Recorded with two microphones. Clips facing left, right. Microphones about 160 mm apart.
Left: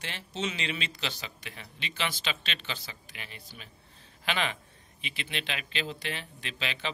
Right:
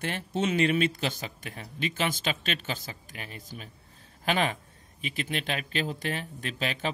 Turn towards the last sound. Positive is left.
turn(degrees=-45)  # may be behind; listen again after turning